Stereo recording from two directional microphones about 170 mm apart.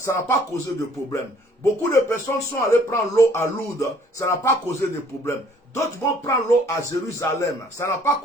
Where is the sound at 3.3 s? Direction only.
15° left (ahead or behind).